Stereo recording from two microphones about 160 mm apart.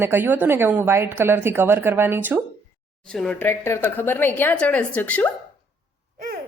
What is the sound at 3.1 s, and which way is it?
A woman's voice, 5° left (ahead or behind).